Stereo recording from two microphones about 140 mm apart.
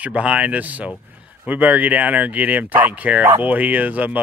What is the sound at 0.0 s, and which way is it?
Speech, 10° right (ahead or behind).